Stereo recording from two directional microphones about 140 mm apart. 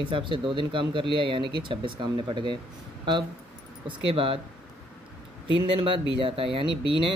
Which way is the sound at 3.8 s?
40° right (ahead or behind).